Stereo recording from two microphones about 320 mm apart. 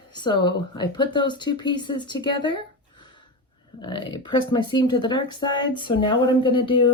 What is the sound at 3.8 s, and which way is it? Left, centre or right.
Speech, centre.